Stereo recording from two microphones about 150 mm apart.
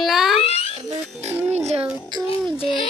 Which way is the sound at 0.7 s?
45° right (ahead or behind).